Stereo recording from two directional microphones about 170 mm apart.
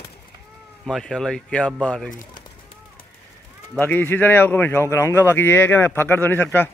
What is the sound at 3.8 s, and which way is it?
A man's voice, 10° left (ahead or behind).